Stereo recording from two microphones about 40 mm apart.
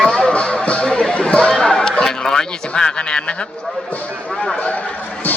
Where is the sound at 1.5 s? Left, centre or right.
Centre.